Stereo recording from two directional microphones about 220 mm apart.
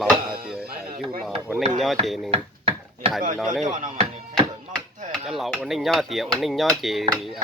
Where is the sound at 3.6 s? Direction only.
35° right (ahead or behind).